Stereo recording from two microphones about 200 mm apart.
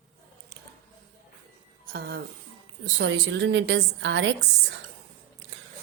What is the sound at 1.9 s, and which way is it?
Speech, 50° right (ahead or behind).